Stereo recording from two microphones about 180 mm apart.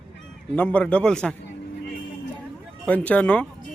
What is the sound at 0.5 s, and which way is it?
Speech, 10° left (ahead or behind).